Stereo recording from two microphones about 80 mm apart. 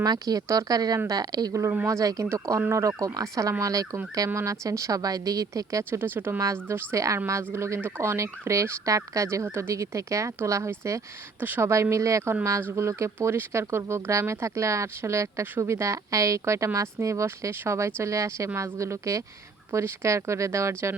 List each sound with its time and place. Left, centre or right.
0.0 s speech: right
0.9 s speech: right
1.2 s speech: right
1.7 s speech: right
5.9 s speech: right
11.3 s speech: right
11.7 s speech: right